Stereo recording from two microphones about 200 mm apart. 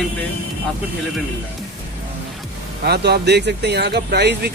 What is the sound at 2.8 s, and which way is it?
Speech, 55° right (ahead or behind).